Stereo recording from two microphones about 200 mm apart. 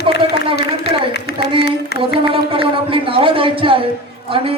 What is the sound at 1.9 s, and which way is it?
Music, 55° left (ahead or behind).